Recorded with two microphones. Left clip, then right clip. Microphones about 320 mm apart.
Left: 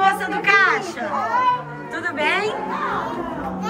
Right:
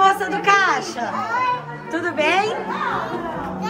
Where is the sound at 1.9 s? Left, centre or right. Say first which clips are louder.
Right 2 dB; centre.